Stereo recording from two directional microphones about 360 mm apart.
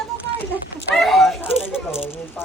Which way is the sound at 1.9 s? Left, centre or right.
Centre.